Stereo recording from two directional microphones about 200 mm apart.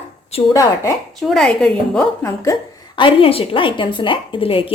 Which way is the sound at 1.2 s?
5° left (ahead or behind).